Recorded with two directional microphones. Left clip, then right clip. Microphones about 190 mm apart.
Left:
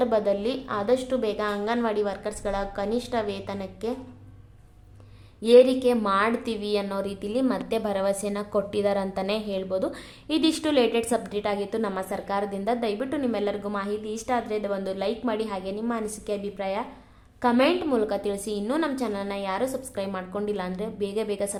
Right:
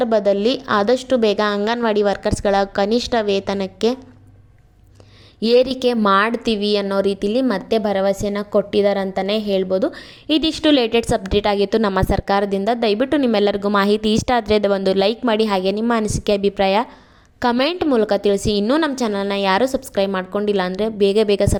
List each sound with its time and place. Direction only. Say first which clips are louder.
0.0 s a woman's voice: right 7 dB; 30° right (ahead or behind)
5.4 s a woman's voice: right 2 dB; 40° right (ahead or behind)